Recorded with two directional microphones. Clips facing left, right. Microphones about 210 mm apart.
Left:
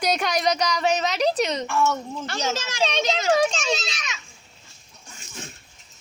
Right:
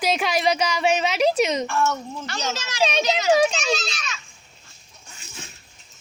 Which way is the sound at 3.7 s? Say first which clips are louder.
Right 1 dB; 20° left (ahead or behind).